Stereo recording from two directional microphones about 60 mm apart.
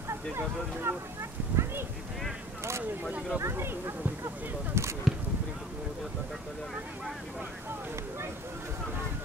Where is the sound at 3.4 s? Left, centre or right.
Right.